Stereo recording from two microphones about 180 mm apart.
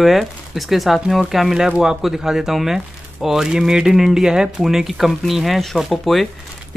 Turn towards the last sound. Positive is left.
turn(degrees=0)  # may be behind; listen again after turning